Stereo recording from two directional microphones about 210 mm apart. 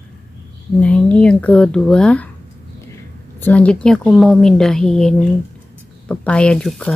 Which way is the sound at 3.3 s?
10° left (ahead or behind).